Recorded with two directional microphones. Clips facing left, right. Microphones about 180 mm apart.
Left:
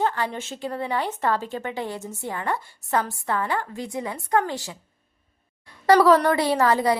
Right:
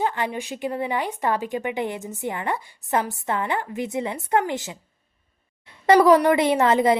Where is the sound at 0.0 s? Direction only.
15° right (ahead or behind).